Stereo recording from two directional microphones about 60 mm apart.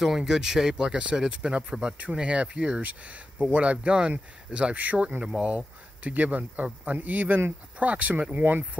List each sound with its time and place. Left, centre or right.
0.0 s speech: centre; by 7.9 s right
7.9 s speech: right